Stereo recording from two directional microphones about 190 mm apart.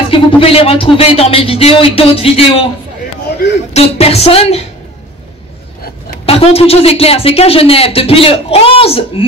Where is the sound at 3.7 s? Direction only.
30° left (ahead or behind).